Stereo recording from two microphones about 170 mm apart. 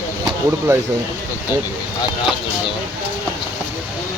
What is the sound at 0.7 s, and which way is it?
Speech, 15° right (ahead or behind).